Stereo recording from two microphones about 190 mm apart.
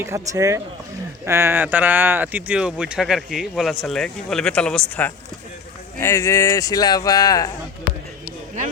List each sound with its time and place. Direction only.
0.0 s speech: 15° right (ahead or behind); by 7.5 s 20° left (ahead or behind)